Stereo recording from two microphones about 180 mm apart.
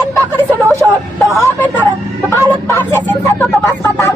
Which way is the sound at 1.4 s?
15° left (ahead or behind).